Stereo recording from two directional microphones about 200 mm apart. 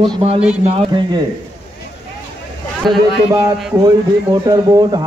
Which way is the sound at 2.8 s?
Centre (ahead or behind).